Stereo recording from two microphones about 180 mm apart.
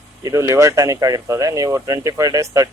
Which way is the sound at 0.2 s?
20° right (ahead or behind).